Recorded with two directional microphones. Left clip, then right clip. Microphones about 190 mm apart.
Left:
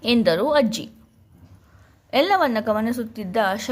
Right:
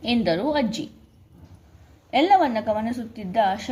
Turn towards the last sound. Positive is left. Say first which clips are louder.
# even
turn(degrees=40)  # may be behind; listen again after turning